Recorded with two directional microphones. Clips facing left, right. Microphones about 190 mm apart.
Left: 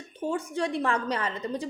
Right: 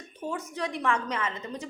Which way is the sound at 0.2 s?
30° left (ahead or behind).